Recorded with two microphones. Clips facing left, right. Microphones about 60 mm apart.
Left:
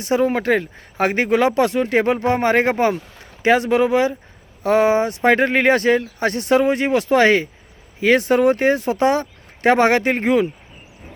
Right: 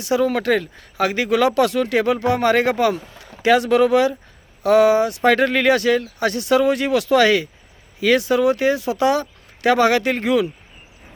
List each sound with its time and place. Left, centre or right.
0.0 s speech: left